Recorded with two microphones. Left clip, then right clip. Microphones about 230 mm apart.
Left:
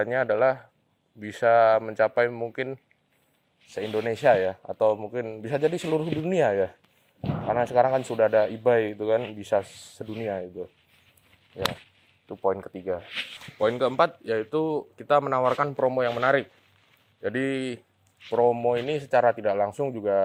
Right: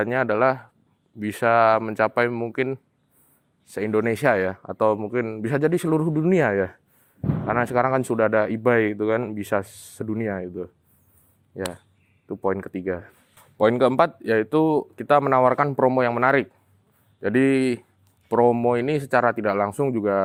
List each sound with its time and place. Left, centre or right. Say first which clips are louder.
0.0 s speech: right 2 dB; right
12.3 s speech: right 1 dB; right
13.6 s speech: right 4 dB; right